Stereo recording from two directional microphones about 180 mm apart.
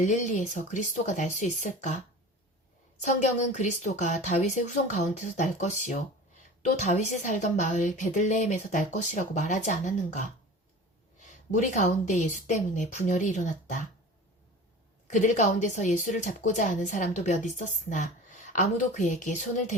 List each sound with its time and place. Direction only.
0.0 s speech: 45° left (ahead or behind)
3.0 s a woman's voice: 40° left (ahead or behind)
11.2 s a woman's voice: 40° left (ahead or behind)
15.1 s a woman's voice: 40° left (ahead or behind)